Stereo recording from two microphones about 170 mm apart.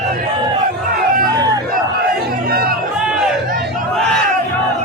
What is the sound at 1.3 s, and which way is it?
Crowd, 20° right (ahead or behind).